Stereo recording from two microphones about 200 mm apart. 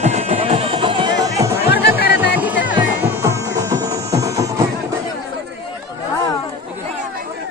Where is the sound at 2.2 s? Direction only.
10° right (ahead or behind).